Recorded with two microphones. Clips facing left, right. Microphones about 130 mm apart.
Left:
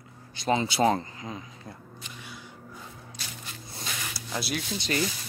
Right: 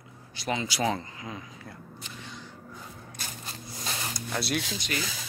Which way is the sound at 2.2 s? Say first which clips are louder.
Right 1 dB; 10° left (ahead or behind).